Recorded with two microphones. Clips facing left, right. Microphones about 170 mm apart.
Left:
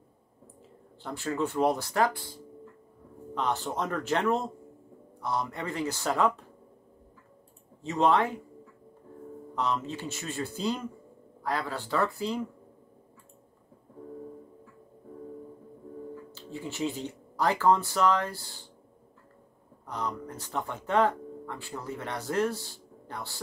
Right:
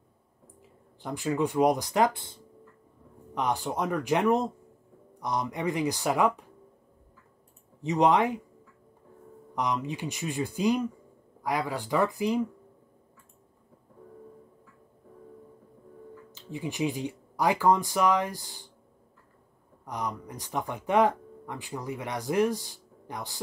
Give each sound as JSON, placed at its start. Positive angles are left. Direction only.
{"t": 1.0, "sound": "speech", "side_deg": -15}
{"t": 7.8, "sound": "speech", "side_deg": -15}
{"t": 9.6, "sound": "speech", "side_deg": -15}
{"t": 16.3, "sound": "speech", "side_deg": -15}
{"t": 19.9, "sound": "speech", "side_deg": -15}